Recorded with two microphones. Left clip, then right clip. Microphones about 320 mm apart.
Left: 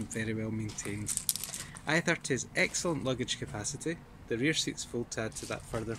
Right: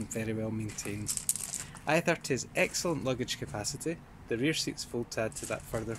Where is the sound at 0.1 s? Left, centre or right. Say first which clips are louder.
Right 1 dB; centre.